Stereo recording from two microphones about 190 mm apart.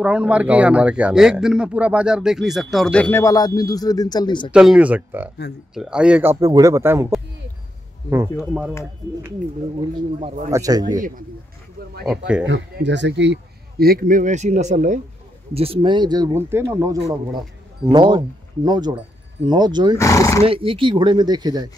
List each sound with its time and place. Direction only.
0.0 s speech: 5° right (ahead or behind); by 4.5 s 20° left (ahead or behind)
4.5 s speech: 5° right (ahead or behind)
6.4 s speech: 15° right (ahead or behind)
8.4 s speech: 5° right (ahead or behind)
9.8 s speech: 30° right (ahead or behind)
11.0 s speech: 45° right (ahead or behind)
12.1 s speech: 5° right (ahead or behind)
12.4 s speech: 70° right (ahead or behind); by 15.0 s 40° right (ahead or behind)
15.5 s speech: 30° right (ahead or behind)
20.0 s speech: 15° left (ahead or behind)
20.4 s speech: 30° right (ahead or behind)